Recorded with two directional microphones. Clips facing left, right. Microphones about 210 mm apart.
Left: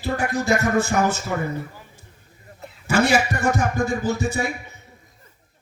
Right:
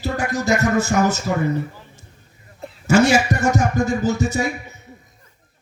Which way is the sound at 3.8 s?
55° left (ahead or behind).